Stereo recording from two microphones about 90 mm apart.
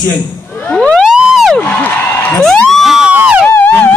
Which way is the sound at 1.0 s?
5° right (ahead or behind).